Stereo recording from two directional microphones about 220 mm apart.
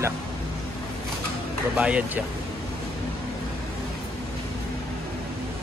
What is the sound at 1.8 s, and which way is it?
Speech, 5° right (ahead or behind).